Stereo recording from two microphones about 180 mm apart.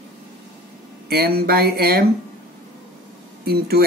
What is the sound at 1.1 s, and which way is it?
Speech, 60° right (ahead or behind).